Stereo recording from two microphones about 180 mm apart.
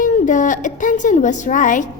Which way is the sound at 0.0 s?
45° left (ahead or behind).